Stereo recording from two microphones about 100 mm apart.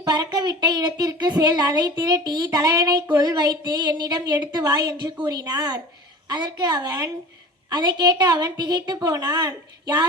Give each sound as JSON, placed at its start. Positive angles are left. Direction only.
{"t": 0.0, "sound": "a woman's voice", "side_deg": -40}